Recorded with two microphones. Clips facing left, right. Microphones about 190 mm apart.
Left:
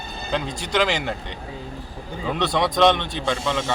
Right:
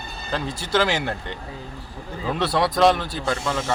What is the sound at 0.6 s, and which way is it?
Speech, 15° left (ahead or behind).